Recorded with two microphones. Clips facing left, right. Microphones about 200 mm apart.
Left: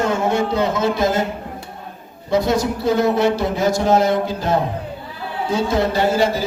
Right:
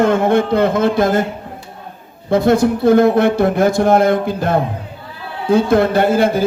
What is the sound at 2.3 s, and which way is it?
A man's voice, 55° right (ahead or behind).